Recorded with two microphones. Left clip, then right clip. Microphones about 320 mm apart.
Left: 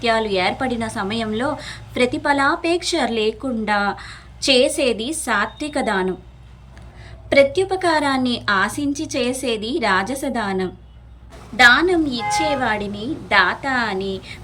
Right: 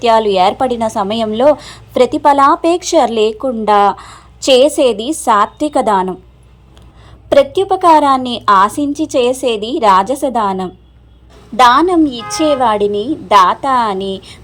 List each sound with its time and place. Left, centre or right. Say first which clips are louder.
0.0 s a woman's voice: right 9 dB; centre
3.4 s speech: right 10 dB; right
3.9 s a woman's voice: right 3 dB; centre
7.5 s a woman's voice: right 10 dB; centre